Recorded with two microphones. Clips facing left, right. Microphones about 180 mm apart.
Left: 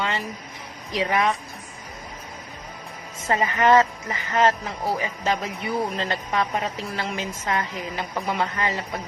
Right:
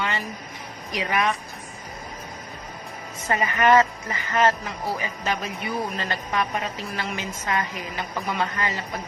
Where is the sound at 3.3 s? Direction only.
20° left (ahead or behind).